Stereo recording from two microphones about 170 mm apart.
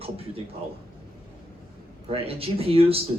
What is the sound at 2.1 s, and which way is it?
Speech, 35° right (ahead or behind).